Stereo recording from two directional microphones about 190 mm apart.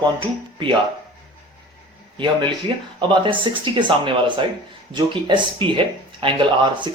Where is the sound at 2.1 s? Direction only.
25° right (ahead or behind).